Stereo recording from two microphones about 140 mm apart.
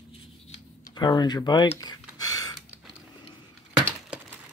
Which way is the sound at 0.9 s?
30° left (ahead or behind).